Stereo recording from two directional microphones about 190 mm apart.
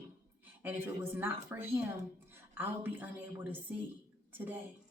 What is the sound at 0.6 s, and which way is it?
A woman's voice, 10° right (ahead or behind).